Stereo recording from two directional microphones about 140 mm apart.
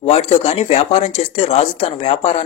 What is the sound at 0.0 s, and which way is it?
Speech, 45° left (ahead or behind).